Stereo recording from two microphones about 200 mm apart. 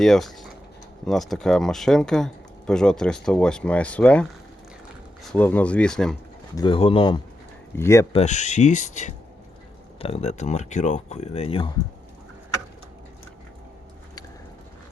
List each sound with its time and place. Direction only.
0.0 s speech: centre (ahead or behind)
6.6 s speech: 25° left (ahead or behind)
7.8 s speech: 15° left (ahead or behind)
8.1 s speech: 35° left (ahead or behind)